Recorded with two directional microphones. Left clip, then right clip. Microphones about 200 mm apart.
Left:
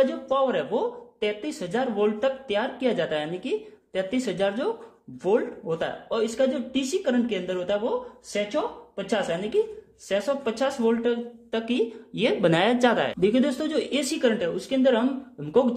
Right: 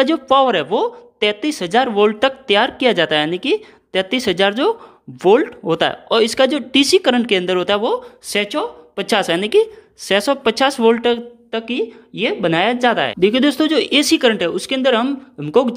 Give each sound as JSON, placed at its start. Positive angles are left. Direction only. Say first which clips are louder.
{"t": 0.0, "sound": "speech", "louder": "right 9 dB", "side_deg": -35}
{"t": 11.5, "sound": "a woman's voice", "louder": "right 5 dB", "side_deg": -20}